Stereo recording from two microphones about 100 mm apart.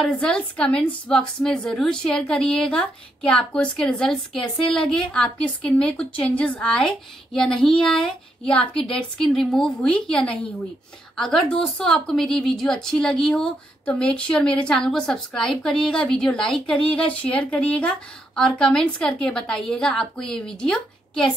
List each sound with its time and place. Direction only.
0.0 s a woman's voice: 5° left (ahead or behind)